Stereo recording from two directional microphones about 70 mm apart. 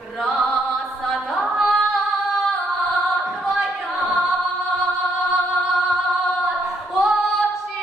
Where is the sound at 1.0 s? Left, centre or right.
Centre.